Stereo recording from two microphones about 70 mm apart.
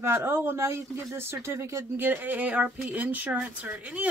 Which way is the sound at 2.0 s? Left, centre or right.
Right.